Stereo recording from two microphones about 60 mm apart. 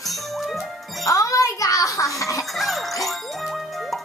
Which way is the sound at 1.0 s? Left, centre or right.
Left.